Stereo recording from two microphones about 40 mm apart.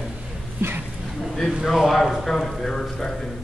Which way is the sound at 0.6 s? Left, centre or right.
Right.